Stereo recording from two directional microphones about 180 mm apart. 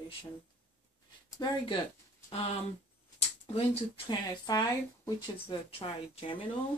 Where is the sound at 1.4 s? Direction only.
25° left (ahead or behind).